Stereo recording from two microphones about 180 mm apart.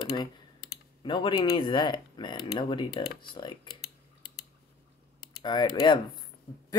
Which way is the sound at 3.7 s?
60° left (ahead or behind).